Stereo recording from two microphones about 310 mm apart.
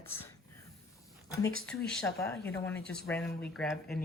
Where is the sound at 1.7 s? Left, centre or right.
Centre.